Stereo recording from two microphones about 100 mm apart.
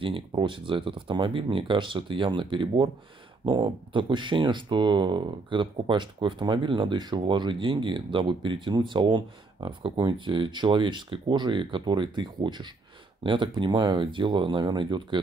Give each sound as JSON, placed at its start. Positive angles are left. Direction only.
{"t": 0.0, "sound": "speech", "side_deg": -55}